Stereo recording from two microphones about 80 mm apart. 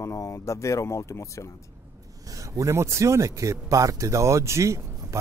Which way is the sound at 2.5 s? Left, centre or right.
Right.